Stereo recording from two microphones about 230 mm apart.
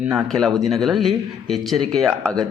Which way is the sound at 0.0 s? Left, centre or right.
Centre.